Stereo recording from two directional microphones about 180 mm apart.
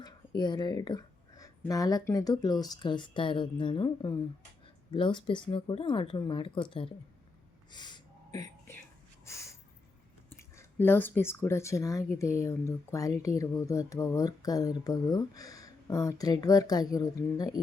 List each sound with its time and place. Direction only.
0.0 s speech: 25° left (ahead or behind)
7.7 s a sound: 25° left (ahead or behind)
10.5 s speech: 15° left (ahead or behind)